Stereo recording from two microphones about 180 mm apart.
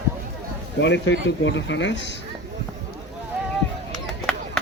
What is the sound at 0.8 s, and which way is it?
Speech, 75° left (ahead or behind).